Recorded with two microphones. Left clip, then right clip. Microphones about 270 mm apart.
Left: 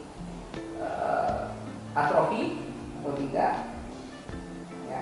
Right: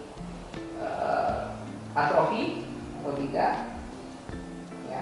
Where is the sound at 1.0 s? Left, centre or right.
Left.